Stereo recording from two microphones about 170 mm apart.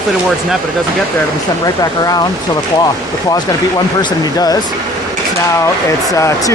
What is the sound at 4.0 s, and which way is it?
Speech, 20° left (ahead or behind).